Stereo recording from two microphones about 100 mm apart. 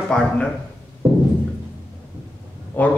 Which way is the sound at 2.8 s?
15° left (ahead or behind).